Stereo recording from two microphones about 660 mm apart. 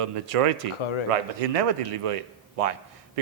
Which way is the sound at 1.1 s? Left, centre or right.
Right.